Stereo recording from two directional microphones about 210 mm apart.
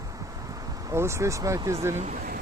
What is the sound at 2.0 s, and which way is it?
Speech, 35° right (ahead or behind).